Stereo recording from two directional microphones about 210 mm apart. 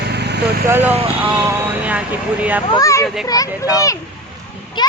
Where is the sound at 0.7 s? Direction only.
10° right (ahead or behind).